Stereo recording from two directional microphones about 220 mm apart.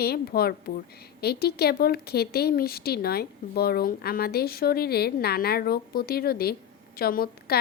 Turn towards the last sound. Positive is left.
turn(degrees=45)  # may be behind; listen again after turning